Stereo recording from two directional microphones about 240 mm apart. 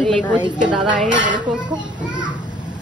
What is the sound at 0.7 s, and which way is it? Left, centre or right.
Speech, centre.